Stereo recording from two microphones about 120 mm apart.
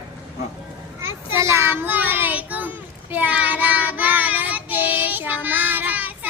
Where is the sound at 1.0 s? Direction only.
20° right (ahead or behind).